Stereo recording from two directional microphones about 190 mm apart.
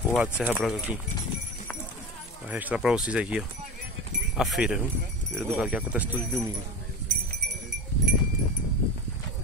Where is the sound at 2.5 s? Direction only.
10° right (ahead or behind).